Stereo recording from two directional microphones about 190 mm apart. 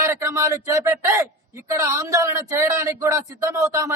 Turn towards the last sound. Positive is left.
turn(degrees=-15)  # may be behind; listen again after turning